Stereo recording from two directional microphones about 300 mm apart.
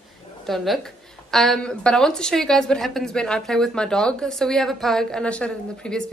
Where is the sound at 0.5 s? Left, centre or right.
Centre.